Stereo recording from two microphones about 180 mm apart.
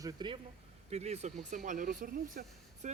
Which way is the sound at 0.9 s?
35° right (ahead or behind).